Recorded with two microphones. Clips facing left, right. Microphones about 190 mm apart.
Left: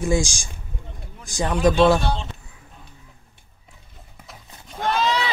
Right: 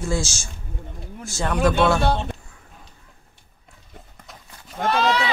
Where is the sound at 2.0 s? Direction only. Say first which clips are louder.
Right 4 dB; 60° right (ahead or behind).